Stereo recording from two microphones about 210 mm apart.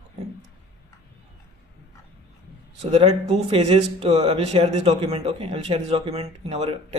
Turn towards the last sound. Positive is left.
turn(degrees=-25)  # may be behind; listen again after turning